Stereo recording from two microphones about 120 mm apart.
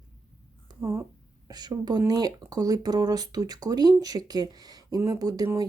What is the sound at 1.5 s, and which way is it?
Speech, 35° right (ahead or behind).